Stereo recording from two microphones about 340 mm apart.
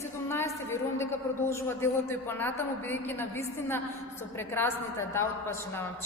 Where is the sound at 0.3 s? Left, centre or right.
Centre.